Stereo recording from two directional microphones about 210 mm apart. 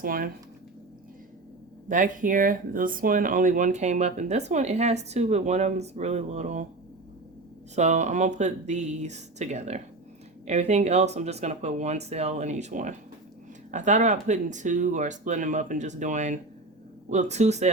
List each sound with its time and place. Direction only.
0.0 s speech: 45° right (ahead or behind)
1.9 s speech: 40° right (ahead or behind)
7.8 s speech: 35° right (ahead or behind)